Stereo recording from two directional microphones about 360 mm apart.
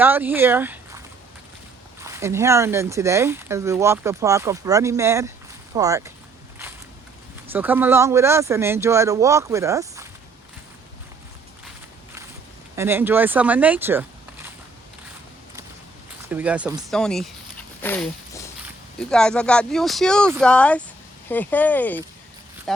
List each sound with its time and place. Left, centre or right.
0.0 s speech: centre
7.5 s speech: centre
12.7 s speech: centre
16.3 s speech: centre
17.8 s a sound: centre
18.9 s speech: centre